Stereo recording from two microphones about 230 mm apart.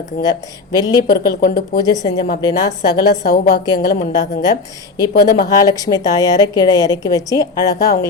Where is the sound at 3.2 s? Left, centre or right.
Left.